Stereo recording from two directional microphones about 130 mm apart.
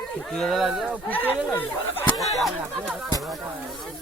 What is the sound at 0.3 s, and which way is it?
Speech, 5° left (ahead or behind).